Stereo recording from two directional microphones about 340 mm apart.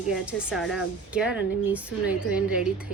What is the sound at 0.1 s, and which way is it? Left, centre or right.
Speech, centre.